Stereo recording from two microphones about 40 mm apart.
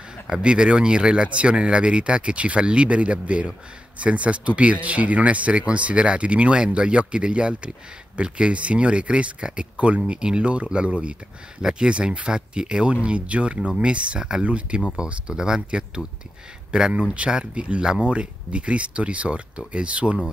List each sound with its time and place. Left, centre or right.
0.3 s speech: right
15.0 s speech: right